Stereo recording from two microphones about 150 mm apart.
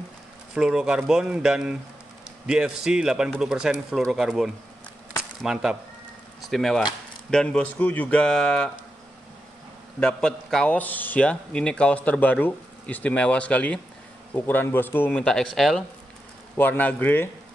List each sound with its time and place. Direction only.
0.6 s speech: 5° right (ahead or behind)
9.9 s a man's voice: 5° left (ahead or behind)
16.5 s a man's voice: 10° left (ahead or behind)